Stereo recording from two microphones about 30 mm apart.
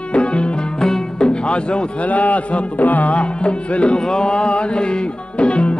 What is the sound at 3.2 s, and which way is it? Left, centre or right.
Music, left.